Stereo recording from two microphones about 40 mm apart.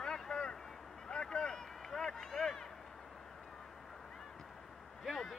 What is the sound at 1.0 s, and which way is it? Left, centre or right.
Speech, centre.